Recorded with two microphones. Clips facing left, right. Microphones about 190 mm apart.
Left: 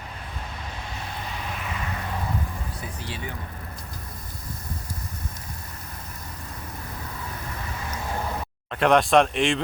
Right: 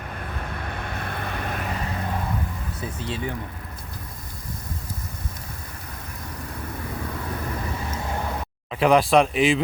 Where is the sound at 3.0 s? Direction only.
25° right (ahead or behind).